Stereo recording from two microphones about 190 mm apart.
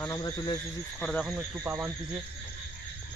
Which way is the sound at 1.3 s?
10° right (ahead or behind).